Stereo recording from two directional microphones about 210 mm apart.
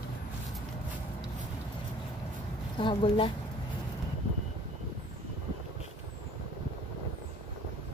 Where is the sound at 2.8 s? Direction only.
25° left (ahead or behind).